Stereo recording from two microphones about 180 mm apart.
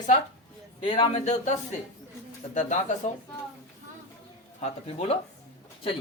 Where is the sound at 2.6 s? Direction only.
40° left (ahead or behind).